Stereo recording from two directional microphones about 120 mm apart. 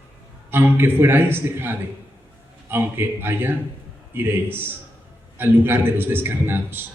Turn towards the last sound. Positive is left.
turn(degrees=-15)  # may be behind; listen again after turning